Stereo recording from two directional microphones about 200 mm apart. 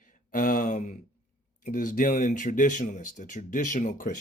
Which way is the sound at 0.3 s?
40° left (ahead or behind).